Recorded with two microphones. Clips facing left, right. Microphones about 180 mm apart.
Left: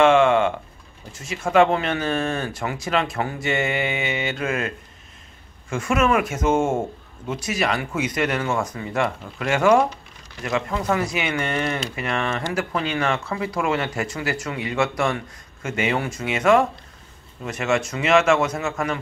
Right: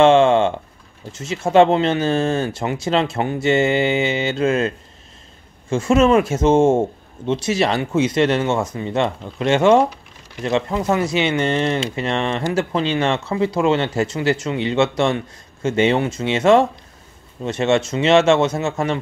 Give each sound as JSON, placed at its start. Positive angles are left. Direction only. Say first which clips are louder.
{"t": 0.0, "sound": "a man's voice", "louder": "right 3 dB", "side_deg": -30}